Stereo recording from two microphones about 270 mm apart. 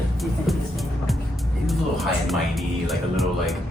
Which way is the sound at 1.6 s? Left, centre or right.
Centre.